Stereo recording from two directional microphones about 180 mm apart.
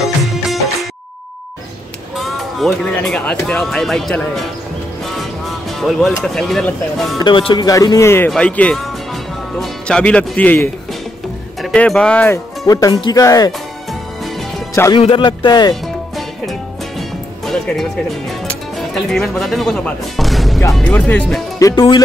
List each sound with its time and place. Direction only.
0.2 s music: centre (ahead or behind)
2.1 s speech: centre (ahead or behind)
5.8 s speech: centre (ahead or behind)
7.2 s speech: 25° left (ahead or behind); by 12.4 s 5° left (ahead or behind)
12.6 s speech: 20° left (ahead or behind)
15.0 s speech: 30° left (ahead or behind)
15.7 s music: centre (ahead or behind)
18.8 s speech: centre (ahead or behind)
21.6 s speech: 25° left (ahead or behind)